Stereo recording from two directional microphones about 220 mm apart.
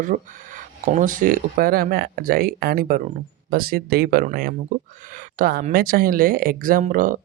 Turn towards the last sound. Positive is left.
turn(degrees=-40)  # may be behind; listen again after turning